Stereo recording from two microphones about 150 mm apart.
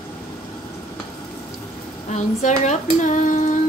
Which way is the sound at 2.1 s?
55° left (ahead or behind).